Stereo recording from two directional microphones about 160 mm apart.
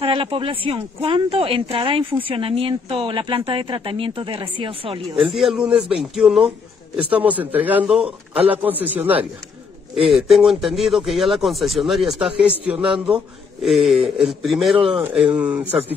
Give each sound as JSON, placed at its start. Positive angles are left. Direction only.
{"t": 0.0, "sound": "speech", "side_deg": -35}
{"t": 5.3, "sound": "a man's voice", "side_deg": 0}